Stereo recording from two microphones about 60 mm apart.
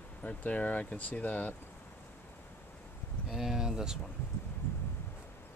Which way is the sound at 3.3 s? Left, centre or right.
Centre.